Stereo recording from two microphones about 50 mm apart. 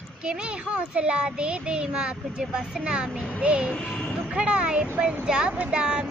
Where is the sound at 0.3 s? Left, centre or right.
Right.